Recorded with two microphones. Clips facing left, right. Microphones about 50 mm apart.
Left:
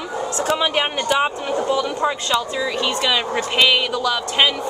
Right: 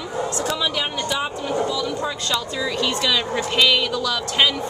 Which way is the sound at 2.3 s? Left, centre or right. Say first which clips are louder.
Left 3 dB; centre.